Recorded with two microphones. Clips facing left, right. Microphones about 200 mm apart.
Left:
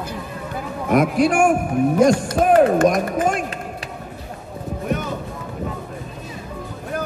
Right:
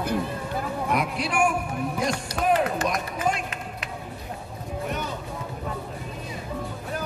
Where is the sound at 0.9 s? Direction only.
45° left (ahead or behind).